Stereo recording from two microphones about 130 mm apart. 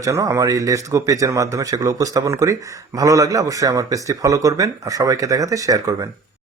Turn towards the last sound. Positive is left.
turn(degrees=-25)  # may be behind; listen again after turning